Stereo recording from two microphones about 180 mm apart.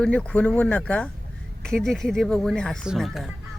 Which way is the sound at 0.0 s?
5° left (ahead or behind).